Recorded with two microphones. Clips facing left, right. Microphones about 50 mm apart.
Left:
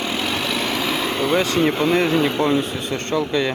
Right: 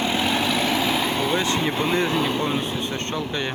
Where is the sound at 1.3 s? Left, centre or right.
Left.